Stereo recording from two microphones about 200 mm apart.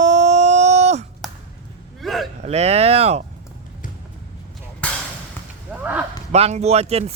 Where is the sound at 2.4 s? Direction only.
30° right (ahead or behind).